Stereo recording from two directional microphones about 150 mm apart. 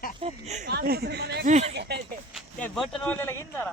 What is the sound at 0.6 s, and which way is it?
Speech, 90° right.